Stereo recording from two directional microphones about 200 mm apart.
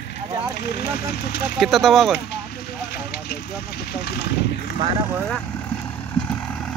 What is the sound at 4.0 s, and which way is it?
Speech, 55° left (ahead or behind).